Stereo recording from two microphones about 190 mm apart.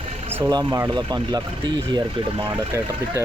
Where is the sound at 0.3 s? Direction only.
20° right (ahead or behind).